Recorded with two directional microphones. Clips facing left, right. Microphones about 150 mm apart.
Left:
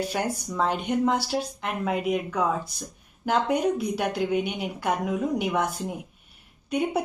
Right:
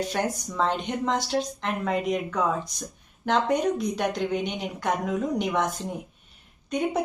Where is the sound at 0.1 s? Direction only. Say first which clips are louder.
Even; 5° left (ahead or behind).